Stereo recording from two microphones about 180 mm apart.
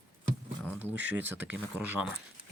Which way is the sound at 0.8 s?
10° right (ahead or behind).